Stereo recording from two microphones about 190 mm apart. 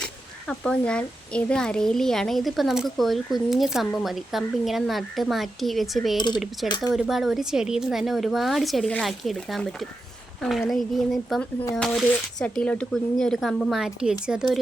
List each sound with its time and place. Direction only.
0.0 s a child's voice: 5° left (ahead or behind)
6.1 s speech: 25° left (ahead or behind)
6.9 s a child's voice: centre (ahead or behind)